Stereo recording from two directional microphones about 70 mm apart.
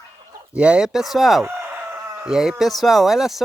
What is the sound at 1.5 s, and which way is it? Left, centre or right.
Chicken, right.